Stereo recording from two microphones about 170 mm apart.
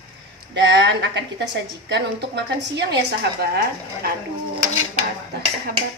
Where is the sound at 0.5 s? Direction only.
90° right.